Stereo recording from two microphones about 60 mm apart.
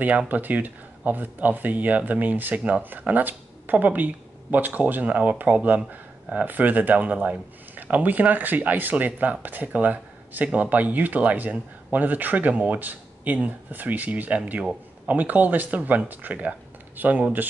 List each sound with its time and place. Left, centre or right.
0.3 s speech: right